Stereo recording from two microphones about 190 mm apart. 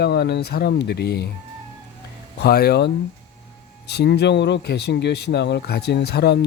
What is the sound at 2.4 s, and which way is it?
Speech, 55° left (ahead or behind).